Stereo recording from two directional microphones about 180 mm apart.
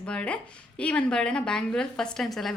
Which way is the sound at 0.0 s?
5° left (ahead or behind).